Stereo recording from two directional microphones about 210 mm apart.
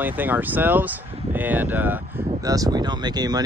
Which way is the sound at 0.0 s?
10° right (ahead or behind).